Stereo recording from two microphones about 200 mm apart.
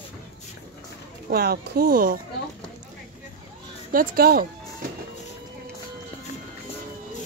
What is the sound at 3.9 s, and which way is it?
Speech, 45° right (ahead or behind).